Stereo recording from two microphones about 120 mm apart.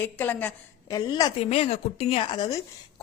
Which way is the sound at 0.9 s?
30° left (ahead or behind).